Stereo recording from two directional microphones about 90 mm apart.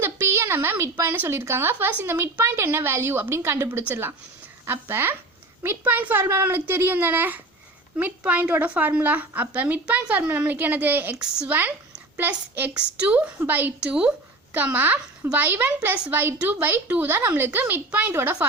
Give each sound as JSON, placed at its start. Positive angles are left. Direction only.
{"t": 0.0, "sound": "a woman's voice", "side_deg": -25}
{"t": 13.8, "sound": "a woman's voice", "side_deg": -10}
{"t": 14.5, "sound": "a woman's voice", "side_deg": -20}